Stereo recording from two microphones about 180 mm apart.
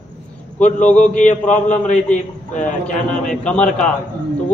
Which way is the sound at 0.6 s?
40° left (ahead or behind).